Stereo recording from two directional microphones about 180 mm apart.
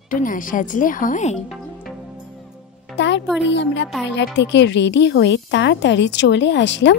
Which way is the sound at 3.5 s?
75° left (ahead or behind).